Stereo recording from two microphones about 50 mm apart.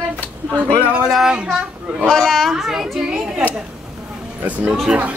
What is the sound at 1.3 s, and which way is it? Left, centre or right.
Speech, centre.